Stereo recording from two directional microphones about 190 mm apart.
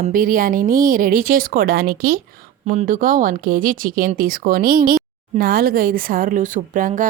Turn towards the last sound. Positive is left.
turn(degrees=-45)  # may be behind; listen again after turning